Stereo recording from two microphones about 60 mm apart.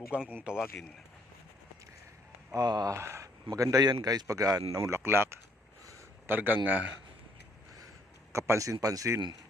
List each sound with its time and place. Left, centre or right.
0.1 s speech: right
2.6 s speech: right
2.9 s a man's voice: right
8.3 s a man's voice: right